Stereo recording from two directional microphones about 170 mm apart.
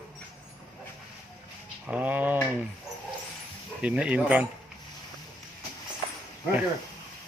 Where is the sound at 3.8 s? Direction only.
5° right (ahead or behind).